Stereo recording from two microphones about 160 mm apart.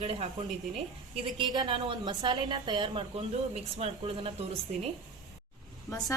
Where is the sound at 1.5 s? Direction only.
35° right (ahead or behind).